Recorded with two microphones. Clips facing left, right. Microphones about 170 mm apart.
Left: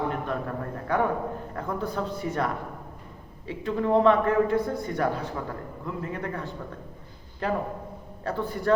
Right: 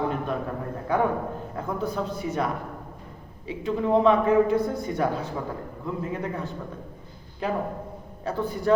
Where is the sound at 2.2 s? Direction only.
20° right (ahead or behind).